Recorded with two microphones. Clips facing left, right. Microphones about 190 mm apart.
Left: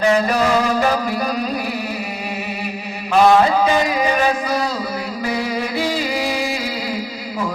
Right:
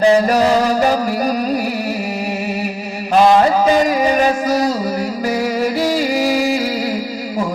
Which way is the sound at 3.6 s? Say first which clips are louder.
Right 4 dB; 40° right (ahead or behind).